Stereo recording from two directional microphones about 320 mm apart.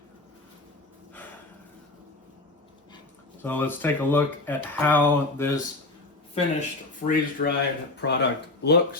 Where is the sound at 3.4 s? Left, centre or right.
Centre.